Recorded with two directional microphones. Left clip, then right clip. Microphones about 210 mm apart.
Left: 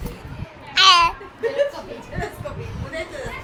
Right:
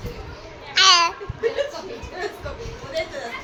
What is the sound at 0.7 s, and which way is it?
Babbling, 5° right (ahead or behind).